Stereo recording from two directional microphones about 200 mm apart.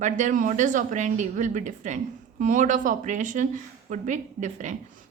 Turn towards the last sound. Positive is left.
turn(degrees=-35)  # may be behind; listen again after turning